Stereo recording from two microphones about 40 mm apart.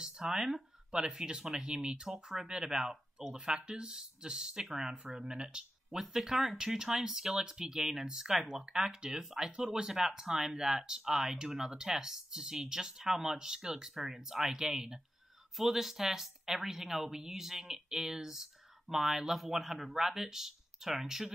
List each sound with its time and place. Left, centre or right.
0.0 s speech: centre
5.9 s speech: centre